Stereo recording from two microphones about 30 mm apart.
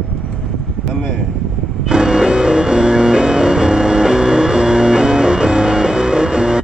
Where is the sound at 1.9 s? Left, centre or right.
Right.